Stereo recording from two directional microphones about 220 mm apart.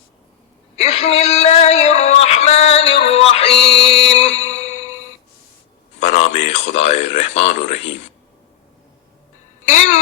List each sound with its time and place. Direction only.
0.8 s a sound: 30° left (ahead or behind)
3.6 s music: 30° left (ahead or behind)
6.0 s speech: 30° left (ahead or behind)
9.6 s music: 35° left (ahead or behind)